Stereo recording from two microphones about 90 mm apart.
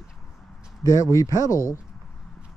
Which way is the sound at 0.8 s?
40° left (ahead or behind).